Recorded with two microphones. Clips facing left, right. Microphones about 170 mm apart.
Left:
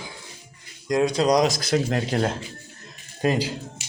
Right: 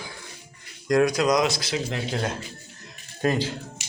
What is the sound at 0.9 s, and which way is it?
Speech, 25° left (ahead or behind).